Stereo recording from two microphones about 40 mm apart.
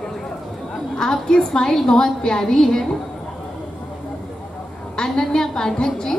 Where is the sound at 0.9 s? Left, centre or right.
Centre.